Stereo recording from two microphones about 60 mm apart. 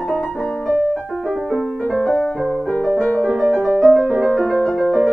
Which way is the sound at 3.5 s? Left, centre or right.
Right.